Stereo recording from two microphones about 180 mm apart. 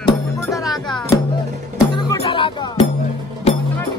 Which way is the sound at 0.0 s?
20° left (ahead or behind).